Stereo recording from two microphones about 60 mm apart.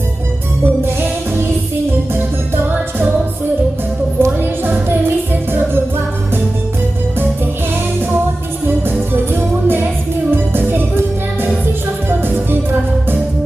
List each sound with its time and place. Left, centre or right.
0.6 s music: right
4.2 s music: right
8.6 s music: right
12.0 s music: right